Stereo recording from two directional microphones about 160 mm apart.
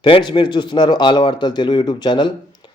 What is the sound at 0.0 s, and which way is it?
Speech, 30° left (ahead or behind).